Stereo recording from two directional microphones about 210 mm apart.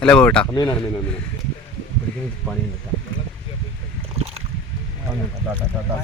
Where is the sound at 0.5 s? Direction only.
20° left (ahead or behind).